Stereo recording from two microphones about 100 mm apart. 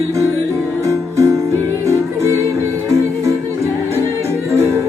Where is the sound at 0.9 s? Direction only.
30° right (ahead or behind).